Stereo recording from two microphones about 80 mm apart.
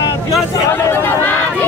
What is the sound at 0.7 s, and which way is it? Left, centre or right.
Chatter, left.